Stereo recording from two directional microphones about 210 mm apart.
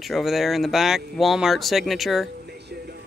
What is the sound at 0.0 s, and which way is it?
Speech, centre (ahead or behind).